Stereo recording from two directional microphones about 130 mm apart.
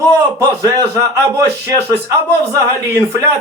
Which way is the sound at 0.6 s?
25° right (ahead or behind).